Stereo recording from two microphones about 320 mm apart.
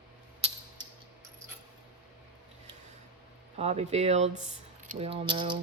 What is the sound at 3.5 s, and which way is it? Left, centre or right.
Speech, centre.